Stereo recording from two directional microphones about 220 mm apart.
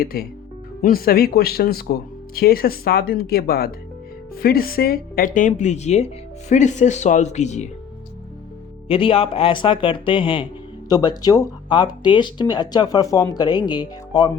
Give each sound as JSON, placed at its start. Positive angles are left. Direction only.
{"t": 0.0, "sound": "speech", "side_deg": 40}
{"t": 8.9, "sound": "speech", "side_deg": 25}